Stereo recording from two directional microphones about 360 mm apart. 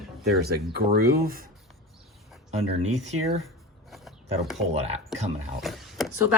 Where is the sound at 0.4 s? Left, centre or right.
Right.